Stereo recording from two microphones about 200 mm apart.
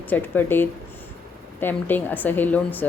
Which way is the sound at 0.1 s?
10° left (ahead or behind).